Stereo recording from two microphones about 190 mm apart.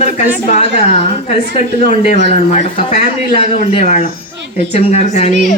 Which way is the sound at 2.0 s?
40° left (ahead or behind).